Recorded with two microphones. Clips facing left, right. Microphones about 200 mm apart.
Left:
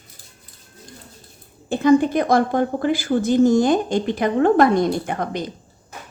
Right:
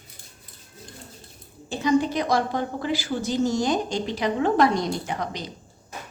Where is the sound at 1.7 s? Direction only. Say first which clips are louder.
Left 6 dB; 55° left (ahead or behind).